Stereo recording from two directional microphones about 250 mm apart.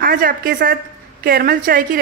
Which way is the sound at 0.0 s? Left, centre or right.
Right.